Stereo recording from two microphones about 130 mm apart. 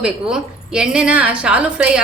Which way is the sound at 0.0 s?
5° right (ahead or behind).